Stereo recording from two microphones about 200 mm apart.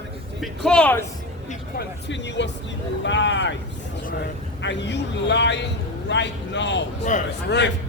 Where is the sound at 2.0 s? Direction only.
60° left (ahead or behind).